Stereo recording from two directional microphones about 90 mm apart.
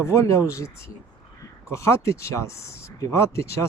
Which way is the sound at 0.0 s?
30° left (ahead or behind).